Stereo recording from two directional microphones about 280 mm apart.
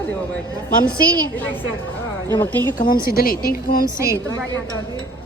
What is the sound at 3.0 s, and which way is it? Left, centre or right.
Speech, left.